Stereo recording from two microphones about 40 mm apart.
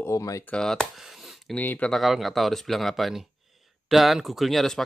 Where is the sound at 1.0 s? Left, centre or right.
Centre.